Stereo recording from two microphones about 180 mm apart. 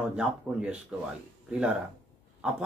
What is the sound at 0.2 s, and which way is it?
Speech, 5° right (ahead or behind).